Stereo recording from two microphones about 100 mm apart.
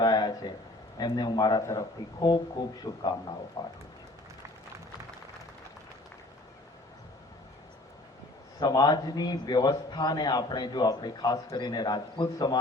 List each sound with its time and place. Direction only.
0.0 s a sound: 45° left (ahead or behind)
0.9 s a man's voice: 45° left (ahead or behind)
8.5 s a man's voice: 45° left (ahead or behind)